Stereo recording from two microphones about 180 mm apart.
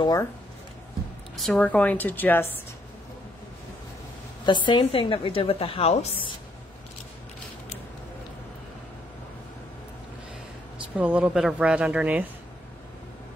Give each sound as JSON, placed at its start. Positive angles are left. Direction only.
{"t": 0.0, "sound": "speech", "side_deg": 20}
{"t": 1.3, "sound": "a woman's voice", "side_deg": 5}
{"t": 4.5, "sound": "a woman's voice", "side_deg": 25}
{"t": 11.0, "sound": "speech", "side_deg": -10}